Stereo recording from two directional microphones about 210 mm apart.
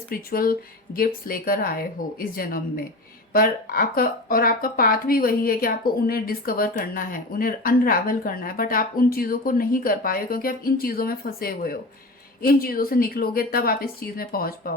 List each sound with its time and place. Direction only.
0.1 s speech: 45° left (ahead or behind)